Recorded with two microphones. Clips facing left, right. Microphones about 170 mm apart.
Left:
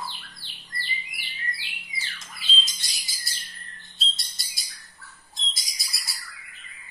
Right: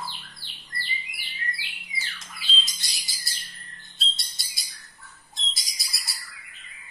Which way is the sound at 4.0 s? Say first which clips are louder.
Even; centre (ahead or behind).